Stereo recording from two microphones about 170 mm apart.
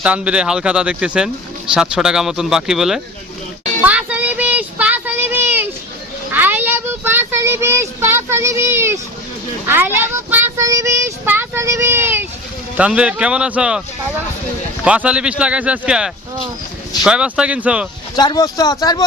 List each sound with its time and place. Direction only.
0.0 s child singing: 5° right (ahead or behind)
1.7 s speech: 5° right (ahead or behind)
3.8 s a sound: 10° right (ahead or behind)
6.3 s speech: 10° right (ahead or behind)
9.6 s child singing: 10° right (ahead or behind)
18.2 s speech: 25° left (ahead or behind)